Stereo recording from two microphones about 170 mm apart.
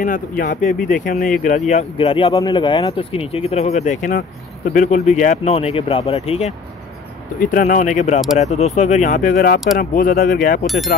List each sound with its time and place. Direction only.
0.0 s speech: 55° left (ahead or behind); by 6.5 s 35° left (ahead or behind)
7.5 s speech: 50° left (ahead or behind)